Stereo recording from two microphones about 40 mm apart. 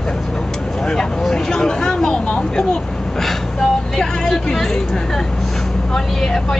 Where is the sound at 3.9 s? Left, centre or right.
Centre.